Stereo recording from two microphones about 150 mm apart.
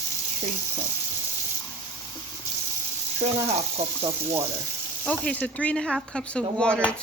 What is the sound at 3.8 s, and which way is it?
Speech, 45° right (ahead or behind).